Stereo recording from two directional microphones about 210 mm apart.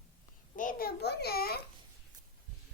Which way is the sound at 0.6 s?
40° left (ahead or behind).